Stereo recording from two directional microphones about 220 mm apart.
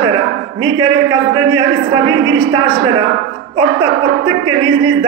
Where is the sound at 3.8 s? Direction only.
90° right.